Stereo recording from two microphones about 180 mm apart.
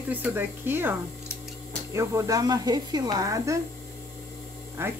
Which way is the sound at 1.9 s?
15° right (ahead or behind).